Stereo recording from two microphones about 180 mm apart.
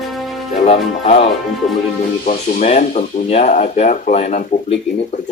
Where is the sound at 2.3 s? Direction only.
40° left (ahead or behind).